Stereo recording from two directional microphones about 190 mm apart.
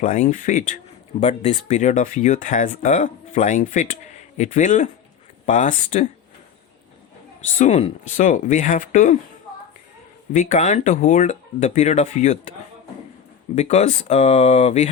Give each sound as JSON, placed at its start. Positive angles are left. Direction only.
{"t": 0.0, "sound": "speech", "side_deg": 40}
{"t": 7.6, "sound": "speech", "side_deg": 40}
{"t": 10.3, "sound": "speech", "side_deg": 40}
{"t": 13.6, "sound": "speech", "side_deg": 35}